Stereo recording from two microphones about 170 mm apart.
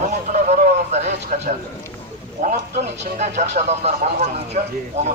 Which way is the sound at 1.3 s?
50° right (ahead or behind).